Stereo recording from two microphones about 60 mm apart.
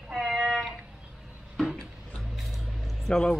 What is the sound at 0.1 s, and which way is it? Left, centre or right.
Cat, centre.